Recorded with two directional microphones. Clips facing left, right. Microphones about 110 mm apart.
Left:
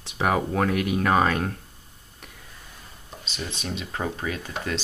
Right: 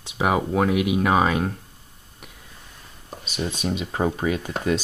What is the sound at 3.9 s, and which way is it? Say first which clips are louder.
Speech: right 6 dB; 25° right (ahead or behind).